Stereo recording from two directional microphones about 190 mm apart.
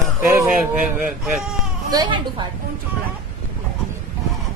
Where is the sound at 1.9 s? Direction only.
25° right (ahead or behind).